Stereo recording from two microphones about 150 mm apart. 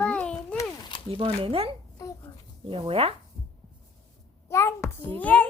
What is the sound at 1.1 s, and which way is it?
Speech, 40° right (ahead or behind).